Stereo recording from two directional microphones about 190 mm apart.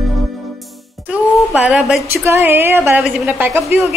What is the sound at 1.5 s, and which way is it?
A woman's voice, 5° right (ahead or behind).